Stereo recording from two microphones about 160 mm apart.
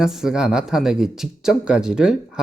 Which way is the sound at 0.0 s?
5° right (ahead or behind).